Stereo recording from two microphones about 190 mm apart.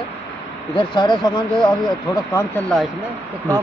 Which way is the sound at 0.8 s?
25° left (ahead or behind).